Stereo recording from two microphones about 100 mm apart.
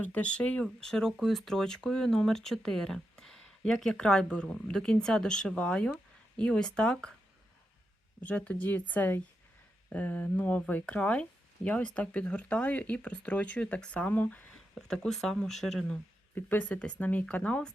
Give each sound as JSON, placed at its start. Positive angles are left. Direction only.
{"t": 0.0, "sound": "speech", "side_deg": 15}
{"t": 8.2, "sound": "speech", "side_deg": 15}
{"t": 16.3, "sound": "speech", "side_deg": 20}